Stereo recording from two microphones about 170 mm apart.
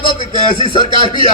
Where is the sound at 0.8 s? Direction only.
30° right (ahead or behind).